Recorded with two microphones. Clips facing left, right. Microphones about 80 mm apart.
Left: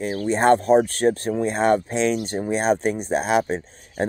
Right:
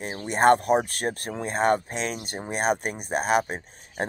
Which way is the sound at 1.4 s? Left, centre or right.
Right.